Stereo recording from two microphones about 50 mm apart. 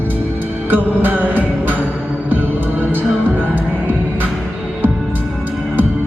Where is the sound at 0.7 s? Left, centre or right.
Right.